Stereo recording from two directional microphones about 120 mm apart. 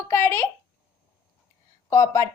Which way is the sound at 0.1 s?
20° left (ahead or behind).